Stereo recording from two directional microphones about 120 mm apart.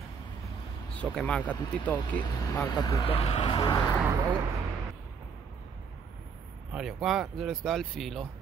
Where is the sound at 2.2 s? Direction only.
30° left (ahead or behind).